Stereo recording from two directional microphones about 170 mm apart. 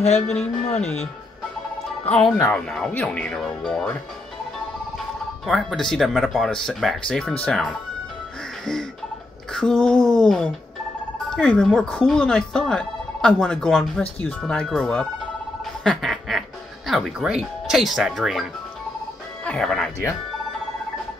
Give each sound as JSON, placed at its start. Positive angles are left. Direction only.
{"t": 0.0, "sound": "speech", "side_deg": 40}
{"t": 0.7, "sound": "speech", "side_deg": 5}
{"t": 2.5, "sound": "speech", "side_deg": 5}
{"t": 5.5, "sound": "speech", "side_deg": 0}
{"t": 9.5, "sound": "speech", "side_deg": 5}
{"t": 19.4, "sound": "speech", "side_deg": 5}